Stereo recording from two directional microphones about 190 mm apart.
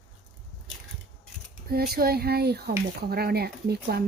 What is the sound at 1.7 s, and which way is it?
Speech, 55° right (ahead or behind).